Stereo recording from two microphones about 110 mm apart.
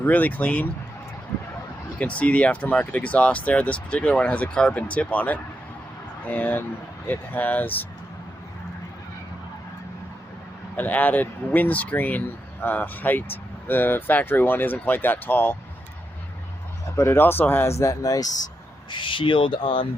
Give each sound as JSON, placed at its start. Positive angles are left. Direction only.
{"t": 0.0, "sound": "speech", "side_deg": 15}
{"t": 2.0, "sound": "speech", "side_deg": 10}
{"t": 10.8, "sound": "speech", "side_deg": 15}
{"t": 16.9, "sound": "speech", "side_deg": 20}
{"t": 18.9, "sound": "speech", "side_deg": 50}